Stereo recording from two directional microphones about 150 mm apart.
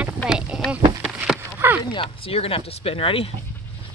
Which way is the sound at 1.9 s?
35° left (ahead or behind).